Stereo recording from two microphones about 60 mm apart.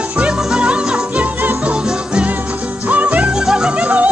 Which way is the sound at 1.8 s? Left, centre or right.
Centre.